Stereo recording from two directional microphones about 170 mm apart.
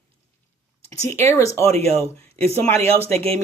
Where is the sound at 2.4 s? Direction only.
15° left (ahead or behind).